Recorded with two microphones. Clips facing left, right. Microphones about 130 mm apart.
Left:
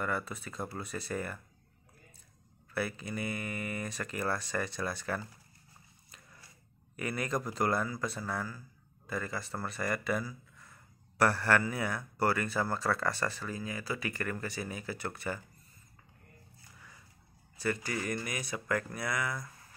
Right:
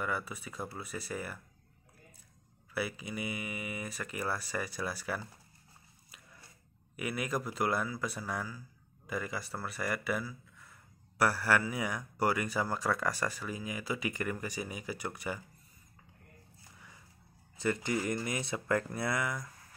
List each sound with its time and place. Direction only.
0.0 s speech: 10° right (ahead or behind)
2.7 s speech: 10° right (ahead or behind)
7.0 s speech: 5° right (ahead or behind)
17.6 s speech: 20° right (ahead or behind)